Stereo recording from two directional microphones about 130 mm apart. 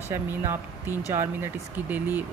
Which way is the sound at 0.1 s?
15° right (ahead or behind).